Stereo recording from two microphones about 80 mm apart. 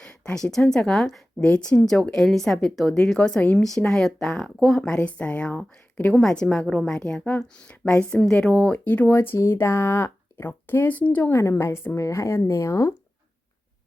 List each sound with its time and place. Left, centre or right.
0.0 s a woman's voice: centre
1.5 s a woman's voice: centre
6.1 s a woman's voice: centre
11.3 s a woman's voice: left